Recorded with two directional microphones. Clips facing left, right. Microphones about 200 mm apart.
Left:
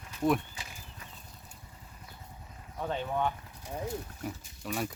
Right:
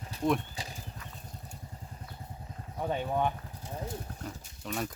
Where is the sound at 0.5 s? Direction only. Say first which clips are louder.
Right 5 dB; 35° right (ahead or behind).